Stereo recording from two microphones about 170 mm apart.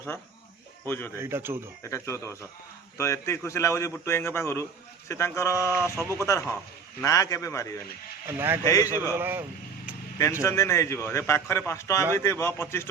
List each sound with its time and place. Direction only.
0.9 s a man's voice: 10° left (ahead or behind)
1.1 s speech: 15° right (ahead or behind)
1.8 s a man's voice: 15° left (ahead or behind)
6.0 s speech: 20° right (ahead or behind)
6.2 s a man's voice: 15° left (ahead or behind)
8.3 s speech: 15° right (ahead or behind)
8.6 s a man's voice: 20° left (ahead or behind)
9.1 s speech: 10° right (ahead or behind)
10.4 s a man's voice: 15° left (ahead or behind)